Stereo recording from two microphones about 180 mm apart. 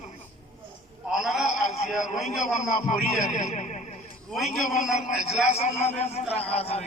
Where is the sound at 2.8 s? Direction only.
40° left (ahead or behind).